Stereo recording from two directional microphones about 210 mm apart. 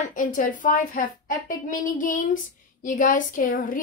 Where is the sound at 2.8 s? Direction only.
40° left (ahead or behind).